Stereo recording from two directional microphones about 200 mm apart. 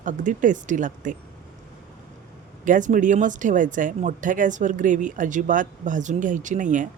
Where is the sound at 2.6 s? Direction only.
40° right (ahead or behind).